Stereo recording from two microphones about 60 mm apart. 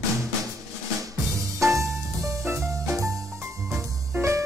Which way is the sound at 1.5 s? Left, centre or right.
Right.